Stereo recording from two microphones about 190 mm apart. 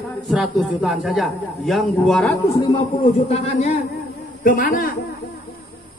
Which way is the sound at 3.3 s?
35° left (ahead or behind).